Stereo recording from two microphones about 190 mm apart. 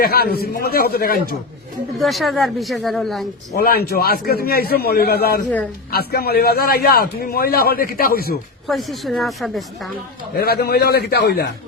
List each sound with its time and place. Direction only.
0.0 s a man's voice: 55° left (ahead or behind)
2.0 s speech: centre (ahead or behind)
3.5 s a man's voice: 55° left (ahead or behind)
8.6 s speech: centre (ahead or behind)
10.3 s a man's voice: 55° left (ahead or behind)